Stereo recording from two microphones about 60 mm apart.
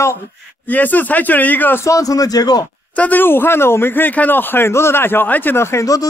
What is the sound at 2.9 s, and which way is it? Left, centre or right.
Speech, left.